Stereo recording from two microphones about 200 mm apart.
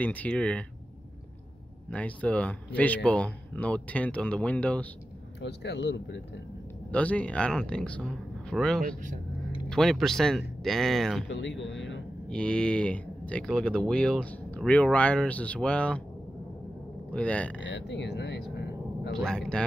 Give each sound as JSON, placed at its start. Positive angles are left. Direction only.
{"t": 0.0, "sound": "a man's voice", "side_deg": 5}
{"t": 1.9, "sound": "a man's voice", "side_deg": 5}
{"t": 5.4, "sound": "speech", "side_deg": 60}
{"t": 6.9, "sound": "speech", "side_deg": 5}
{"t": 11.2, "sound": "speech", "side_deg": 65}
{"t": 12.3, "sound": "speech", "side_deg": 5}
{"t": 17.1, "sound": "a man's voice", "side_deg": 5}
{"t": 17.6, "sound": "speech", "side_deg": 60}
{"t": 19.1, "sound": "speech", "side_deg": 5}